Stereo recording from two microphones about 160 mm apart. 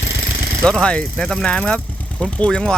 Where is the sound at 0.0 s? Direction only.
90° left.